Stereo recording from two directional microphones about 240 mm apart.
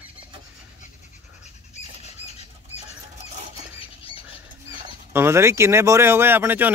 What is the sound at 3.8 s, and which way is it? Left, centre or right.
Bird flight, left.